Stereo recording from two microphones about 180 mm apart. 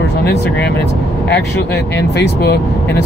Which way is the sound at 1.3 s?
65° left (ahead or behind).